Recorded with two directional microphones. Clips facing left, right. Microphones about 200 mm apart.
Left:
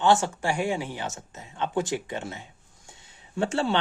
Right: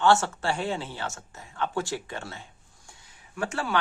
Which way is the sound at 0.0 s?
15° left (ahead or behind).